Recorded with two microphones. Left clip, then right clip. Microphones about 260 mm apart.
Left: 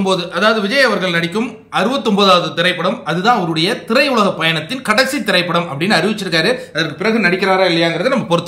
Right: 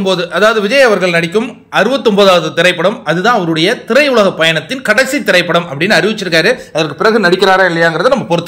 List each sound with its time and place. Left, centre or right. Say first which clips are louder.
0.4 s a man's voice: right 5 dB; centre
7.0 s a man's voice: right 6 dB; right